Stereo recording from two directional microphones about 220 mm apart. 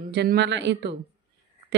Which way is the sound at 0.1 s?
50° right (ahead or behind).